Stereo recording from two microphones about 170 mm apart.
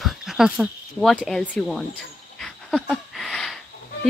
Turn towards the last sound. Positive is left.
turn(degrees=0)  # may be behind; listen again after turning